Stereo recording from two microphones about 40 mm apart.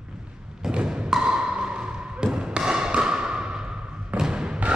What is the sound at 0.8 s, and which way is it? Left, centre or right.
Thump, centre.